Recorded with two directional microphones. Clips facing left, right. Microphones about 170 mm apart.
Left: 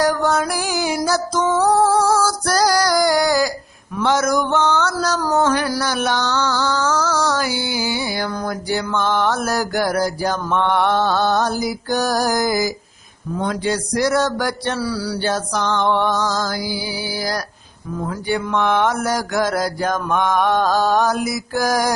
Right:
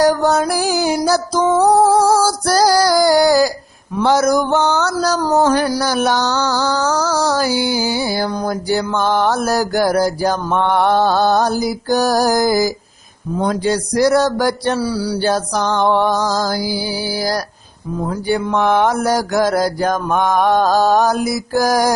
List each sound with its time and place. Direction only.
0.0 s music: 35° right (ahead or behind)
2.0 s female singing: 35° right (ahead or behind)
4.0 s mantra: 35° right (ahead or behind)
14.8 s a sound: 20° right (ahead or behind)
15.2 s mantra: 40° right (ahead or behind)